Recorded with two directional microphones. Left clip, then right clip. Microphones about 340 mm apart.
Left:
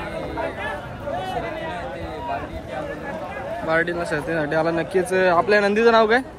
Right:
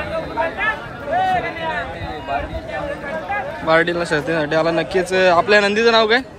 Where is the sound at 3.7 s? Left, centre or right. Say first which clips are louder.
Right 6 dB; centre.